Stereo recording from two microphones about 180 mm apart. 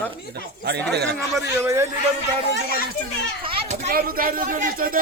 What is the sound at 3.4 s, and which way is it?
Children playing, 35° right (ahead or behind).